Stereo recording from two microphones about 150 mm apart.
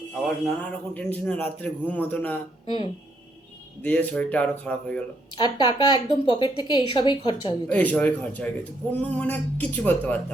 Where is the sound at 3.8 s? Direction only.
10° left (ahead or behind).